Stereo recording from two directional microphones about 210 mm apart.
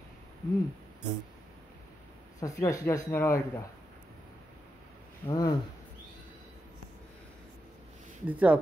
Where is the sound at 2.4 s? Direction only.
15° left (ahead or behind).